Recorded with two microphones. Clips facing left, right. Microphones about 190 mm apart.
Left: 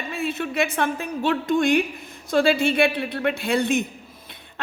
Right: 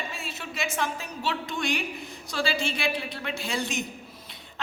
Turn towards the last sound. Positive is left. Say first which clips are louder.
# left 9 dB
turn(degrees=55)  # may be behind; listen again after turning